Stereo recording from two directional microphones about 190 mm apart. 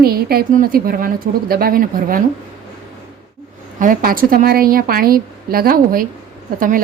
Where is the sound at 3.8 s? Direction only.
45° right (ahead or behind).